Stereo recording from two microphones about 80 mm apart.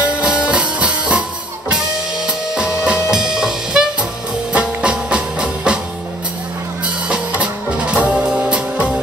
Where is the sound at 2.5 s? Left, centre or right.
Centre.